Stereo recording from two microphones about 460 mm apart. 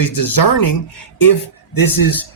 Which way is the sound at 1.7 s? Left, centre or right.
Left.